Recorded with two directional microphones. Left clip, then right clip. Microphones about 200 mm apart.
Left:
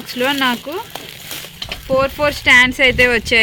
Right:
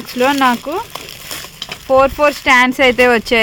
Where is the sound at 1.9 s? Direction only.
45° right (ahead or behind).